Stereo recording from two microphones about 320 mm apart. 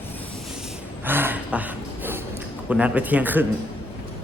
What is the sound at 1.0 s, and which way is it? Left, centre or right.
Gasp, centre.